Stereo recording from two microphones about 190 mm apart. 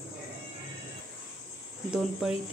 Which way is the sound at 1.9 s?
5° right (ahead or behind).